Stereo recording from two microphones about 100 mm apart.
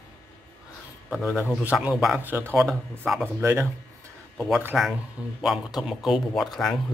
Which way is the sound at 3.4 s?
30° right (ahead or behind).